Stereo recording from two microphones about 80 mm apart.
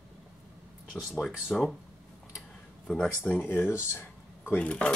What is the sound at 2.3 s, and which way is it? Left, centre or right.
Tick-tock, centre.